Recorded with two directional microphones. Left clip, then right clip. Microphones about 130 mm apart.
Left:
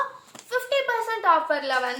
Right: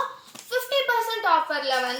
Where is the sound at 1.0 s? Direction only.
20° left (ahead or behind).